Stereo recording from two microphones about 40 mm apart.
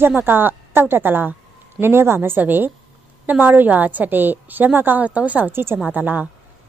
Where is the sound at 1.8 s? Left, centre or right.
Right.